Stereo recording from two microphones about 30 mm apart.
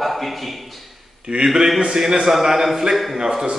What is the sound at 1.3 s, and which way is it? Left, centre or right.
Speech, right.